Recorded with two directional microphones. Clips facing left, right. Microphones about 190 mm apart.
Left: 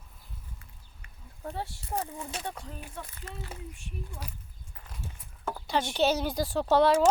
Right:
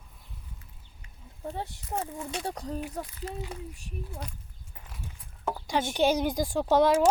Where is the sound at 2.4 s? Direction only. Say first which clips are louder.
Right 5 dB; 40° right (ahead or behind).